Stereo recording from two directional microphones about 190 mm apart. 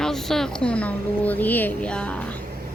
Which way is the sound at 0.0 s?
Centre (ahead or behind).